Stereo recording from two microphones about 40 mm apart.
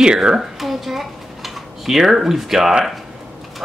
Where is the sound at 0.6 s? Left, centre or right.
Centre.